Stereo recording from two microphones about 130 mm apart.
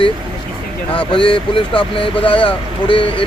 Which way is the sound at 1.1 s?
40° left (ahead or behind).